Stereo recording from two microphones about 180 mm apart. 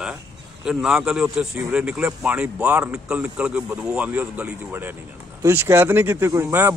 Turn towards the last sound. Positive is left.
turn(degrees=-10)  # may be behind; listen again after turning